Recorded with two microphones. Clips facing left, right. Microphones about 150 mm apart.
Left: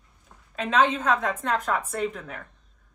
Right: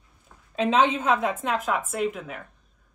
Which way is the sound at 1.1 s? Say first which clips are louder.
Right 1 dB; 5° right (ahead or behind).